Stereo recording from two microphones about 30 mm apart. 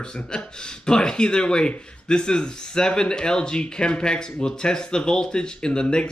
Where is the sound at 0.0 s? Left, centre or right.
Left.